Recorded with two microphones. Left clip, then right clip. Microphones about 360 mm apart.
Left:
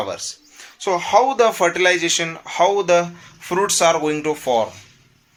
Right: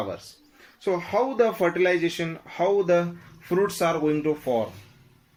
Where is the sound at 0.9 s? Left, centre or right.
Left.